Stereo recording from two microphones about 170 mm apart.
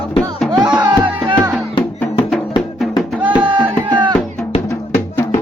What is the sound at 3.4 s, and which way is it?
Music, 25° right (ahead or behind).